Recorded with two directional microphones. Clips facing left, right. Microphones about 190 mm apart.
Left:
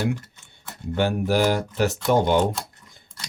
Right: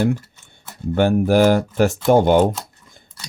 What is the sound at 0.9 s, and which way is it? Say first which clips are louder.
Speech: right 6 dB; 50° right (ahead or behind).